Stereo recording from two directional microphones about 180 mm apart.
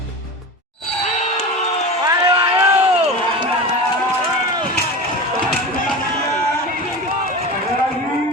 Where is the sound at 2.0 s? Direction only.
25° right (ahead or behind).